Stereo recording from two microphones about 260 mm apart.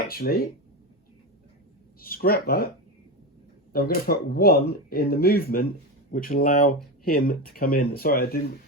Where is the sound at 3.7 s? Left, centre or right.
Left.